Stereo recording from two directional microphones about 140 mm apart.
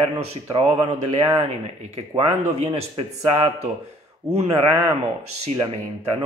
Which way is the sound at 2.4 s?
40° right (ahead or behind).